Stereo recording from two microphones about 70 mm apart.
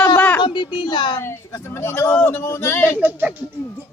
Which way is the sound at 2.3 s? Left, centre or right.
Left.